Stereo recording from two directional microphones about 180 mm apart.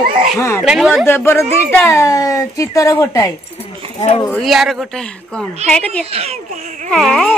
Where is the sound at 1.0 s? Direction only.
15° left (ahead or behind).